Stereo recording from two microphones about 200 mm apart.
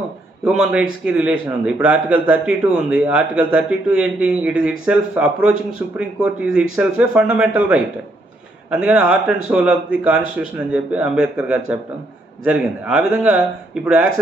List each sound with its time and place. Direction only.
0.5 s a man's voice: 5° right (ahead or behind)